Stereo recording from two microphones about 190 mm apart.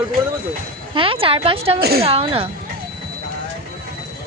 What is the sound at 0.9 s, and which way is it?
Speech, 30° right (ahead or behind).